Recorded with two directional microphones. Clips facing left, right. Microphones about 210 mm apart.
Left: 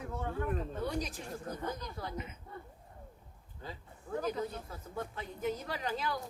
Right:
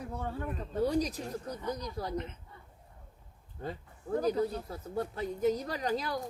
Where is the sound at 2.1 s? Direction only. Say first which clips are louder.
Right 6 dB; 5° left (ahead or behind).